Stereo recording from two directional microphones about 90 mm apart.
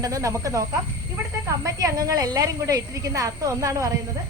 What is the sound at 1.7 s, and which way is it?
Speech, 40° right (ahead or behind).